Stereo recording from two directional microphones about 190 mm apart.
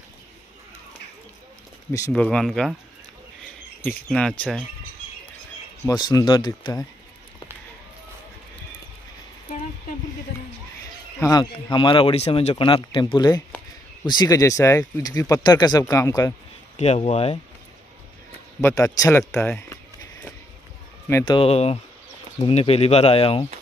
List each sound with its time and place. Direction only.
1.9 s speech: 15° left (ahead or behind)
3.8 s speech: 5° left (ahead or behind)
5.9 s speech: 20° left (ahead or behind)
11.1 s speech: 20° left (ahead or behind)
16.7 s speech: 35° left (ahead or behind)
18.6 s speech: 15° left (ahead or behind)
21.3 s speech: 30° left (ahead or behind)